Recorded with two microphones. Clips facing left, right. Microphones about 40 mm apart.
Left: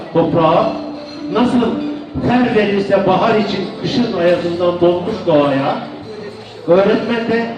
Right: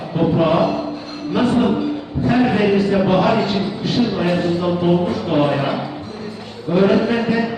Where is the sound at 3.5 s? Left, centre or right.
Left.